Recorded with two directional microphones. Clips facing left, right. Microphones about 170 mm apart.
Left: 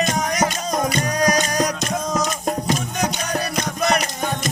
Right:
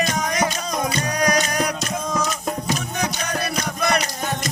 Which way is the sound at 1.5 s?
40° left (ahead or behind).